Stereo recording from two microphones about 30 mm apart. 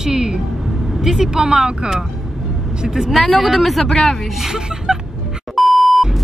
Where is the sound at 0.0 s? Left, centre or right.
Centre.